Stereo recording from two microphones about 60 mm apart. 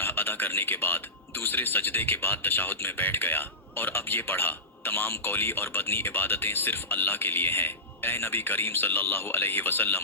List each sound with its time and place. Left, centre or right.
0.0 s speech: left